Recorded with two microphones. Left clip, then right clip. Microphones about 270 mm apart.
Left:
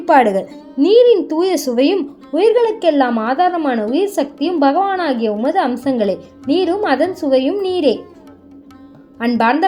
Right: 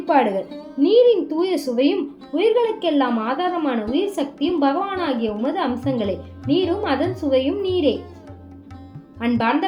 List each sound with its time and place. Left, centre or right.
0.0 s a woman's voice: left
9.1 s a woman's voice: left